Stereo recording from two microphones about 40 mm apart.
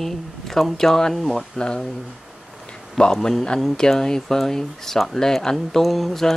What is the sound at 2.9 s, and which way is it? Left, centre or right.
Speech, centre.